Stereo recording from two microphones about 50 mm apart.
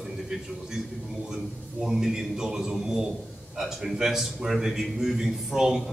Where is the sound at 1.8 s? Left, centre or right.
Centre.